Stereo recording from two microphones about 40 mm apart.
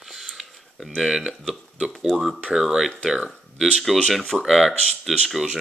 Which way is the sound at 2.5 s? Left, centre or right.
Centre.